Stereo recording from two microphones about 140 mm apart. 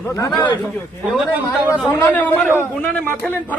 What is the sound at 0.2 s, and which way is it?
Speech, 25° left (ahead or behind).